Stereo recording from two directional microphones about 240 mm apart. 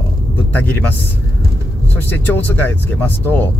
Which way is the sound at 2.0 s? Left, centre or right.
Centre.